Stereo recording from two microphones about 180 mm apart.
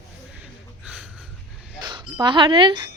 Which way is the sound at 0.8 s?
5° right (ahead or behind).